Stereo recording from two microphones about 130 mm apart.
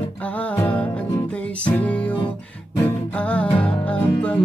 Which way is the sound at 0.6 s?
10° left (ahead or behind).